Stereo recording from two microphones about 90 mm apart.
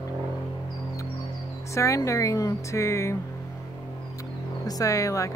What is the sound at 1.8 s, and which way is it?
A woman's voice, 35° left (ahead or behind).